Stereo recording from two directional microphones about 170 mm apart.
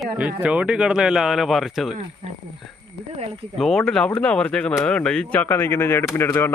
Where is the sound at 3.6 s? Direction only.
Centre (ahead or behind).